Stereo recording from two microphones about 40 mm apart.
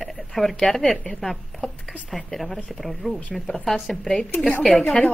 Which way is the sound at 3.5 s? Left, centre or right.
Centre.